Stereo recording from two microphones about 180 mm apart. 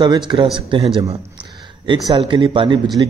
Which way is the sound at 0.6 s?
30° right (ahead or behind).